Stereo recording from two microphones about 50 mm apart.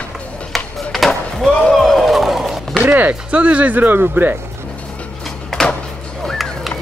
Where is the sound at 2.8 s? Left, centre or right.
Right.